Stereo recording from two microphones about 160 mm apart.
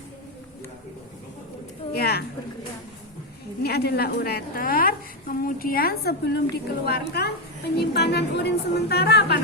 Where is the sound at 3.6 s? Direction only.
80° left.